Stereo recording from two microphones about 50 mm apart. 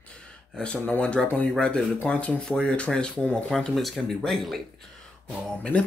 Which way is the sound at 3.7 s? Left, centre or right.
Centre.